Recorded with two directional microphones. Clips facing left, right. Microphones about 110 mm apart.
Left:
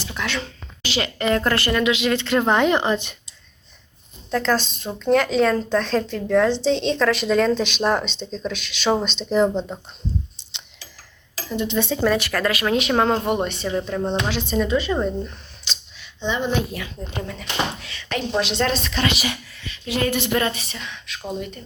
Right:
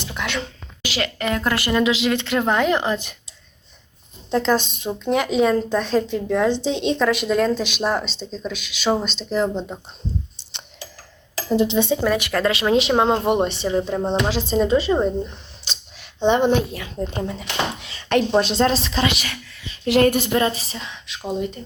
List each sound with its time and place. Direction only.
0.1 s a woman's voice: 15° right (ahead or behind)
1.7 s speech: 25° right (ahead or behind)
2.0 s speech: 10° right (ahead or behind)
4.3 s speech: 20° right (ahead or behind); by 9.5 s centre (ahead or behind)
11.4 s speech: 30° right (ahead or behind)
12.0 s speech: 15° right (ahead or behind)
14.3 s speech: 35° right (ahead or behind)
14.9 s speech: 15° right (ahead or behind)
16.0 s speech: 55° right (ahead or behind)
16.7 s speech: 30° right (ahead or behind)
18.1 s speech: 45° right (ahead or behind); by 19.0 s 30° right (ahead or behind)
20.1 s a woman's voice: 45° right (ahead or behind)
20.3 s speech: 30° right (ahead or behind)